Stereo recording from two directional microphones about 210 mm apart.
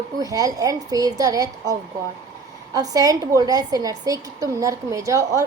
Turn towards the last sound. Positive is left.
turn(degrees=-15)  # may be behind; listen again after turning